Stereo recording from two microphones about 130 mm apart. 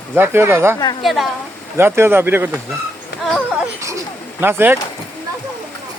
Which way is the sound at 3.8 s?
25° right (ahead or behind).